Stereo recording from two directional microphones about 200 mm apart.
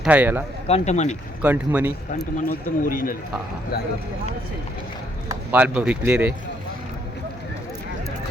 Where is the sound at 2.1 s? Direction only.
45° left (ahead or behind).